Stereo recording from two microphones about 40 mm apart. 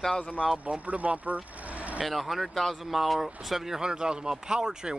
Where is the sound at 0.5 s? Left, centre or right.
Right.